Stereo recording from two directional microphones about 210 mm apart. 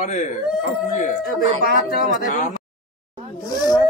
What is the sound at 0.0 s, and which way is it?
Speech, 35° left (ahead or behind).